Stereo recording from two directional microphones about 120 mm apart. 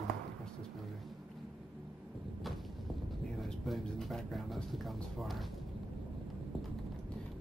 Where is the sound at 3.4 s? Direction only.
Centre (ahead or behind).